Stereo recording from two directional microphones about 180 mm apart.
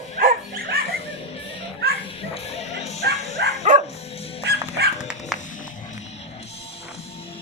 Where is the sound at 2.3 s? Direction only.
35° left (ahead or behind).